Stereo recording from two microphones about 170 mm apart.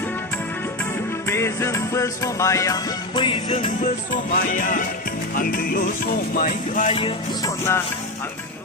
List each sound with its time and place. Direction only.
1.3 s music: 15° left (ahead or behind); by 3.7 s 30° left (ahead or behind)
4.1 s music: 50° left (ahead or behind)
6.8 s music: 30° left (ahead or behind)
7.4 s music: 15° left (ahead or behind)